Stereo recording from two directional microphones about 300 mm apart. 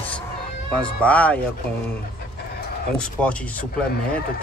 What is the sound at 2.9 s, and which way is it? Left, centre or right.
Speech, centre.